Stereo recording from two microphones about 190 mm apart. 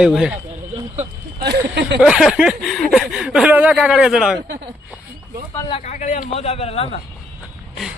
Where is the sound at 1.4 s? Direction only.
60° right (ahead or behind).